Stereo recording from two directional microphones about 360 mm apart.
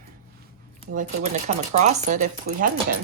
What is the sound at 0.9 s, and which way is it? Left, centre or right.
A woman's voice, centre.